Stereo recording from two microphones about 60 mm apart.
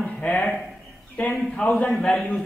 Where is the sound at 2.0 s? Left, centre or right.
Centre.